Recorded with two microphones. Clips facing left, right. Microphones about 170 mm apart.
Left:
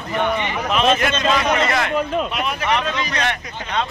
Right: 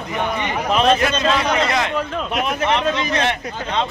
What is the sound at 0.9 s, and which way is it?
Speech, 35° right (ahead or behind).